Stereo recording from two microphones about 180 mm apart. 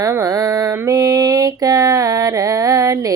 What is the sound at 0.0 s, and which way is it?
Mantra, 20° right (ahead or behind).